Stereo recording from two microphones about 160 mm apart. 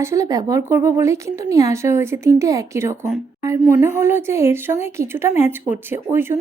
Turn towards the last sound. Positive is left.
turn(degrees=-15)  # may be behind; listen again after turning